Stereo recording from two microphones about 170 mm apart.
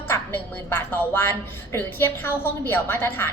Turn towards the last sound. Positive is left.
turn(degrees=15)  # may be behind; listen again after turning